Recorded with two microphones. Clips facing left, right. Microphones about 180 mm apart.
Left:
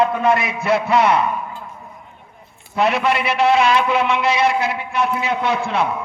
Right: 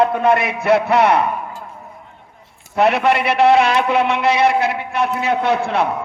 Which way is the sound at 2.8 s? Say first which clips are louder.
Right 3 dB; 60° right (ahead or behind).